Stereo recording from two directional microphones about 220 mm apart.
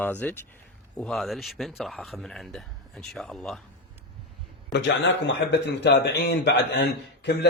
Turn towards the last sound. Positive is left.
turn(degrees=50)  # may be behind; listen again after turning